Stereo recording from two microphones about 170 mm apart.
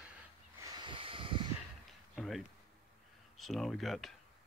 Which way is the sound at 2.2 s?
Centre (ahead or behind).